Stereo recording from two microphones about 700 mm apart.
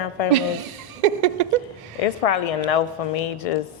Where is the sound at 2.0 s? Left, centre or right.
Left.